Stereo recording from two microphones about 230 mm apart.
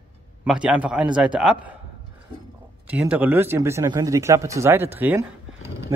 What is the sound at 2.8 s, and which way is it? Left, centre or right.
Speech, centre.